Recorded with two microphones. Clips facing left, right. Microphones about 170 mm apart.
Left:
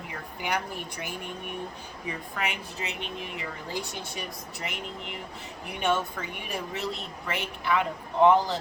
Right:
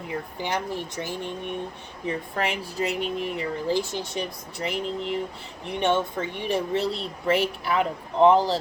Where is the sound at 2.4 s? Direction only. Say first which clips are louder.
Right 6 dB; 35° right (ahead or behind).